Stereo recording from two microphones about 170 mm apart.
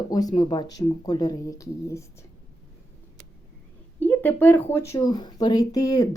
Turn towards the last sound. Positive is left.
turn(degrees=20)  # may be behind; listen again after turning